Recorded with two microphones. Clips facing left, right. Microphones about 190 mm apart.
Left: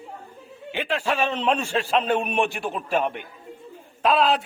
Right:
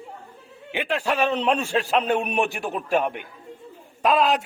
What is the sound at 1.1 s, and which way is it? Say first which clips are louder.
A man's voice: right 2 dB; 10° right (ahead or behind).